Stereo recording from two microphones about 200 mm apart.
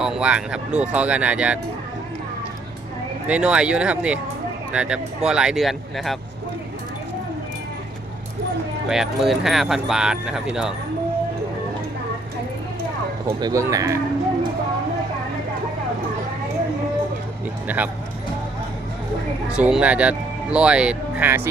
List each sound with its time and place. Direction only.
0.0 s speech: 5° right (ahead or behind)
3.2 s speech: 5° right (ahead or behind)
8.9 s speech: centre (ahead or behind)
13.2 s speech: 15° right (ahead or behind)
17.7 s speech: 10° right (ahead or behind)
19.5 s speech: 5° right (ahead or behind)